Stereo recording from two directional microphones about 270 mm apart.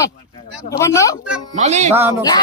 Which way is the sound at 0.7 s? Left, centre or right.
Centre.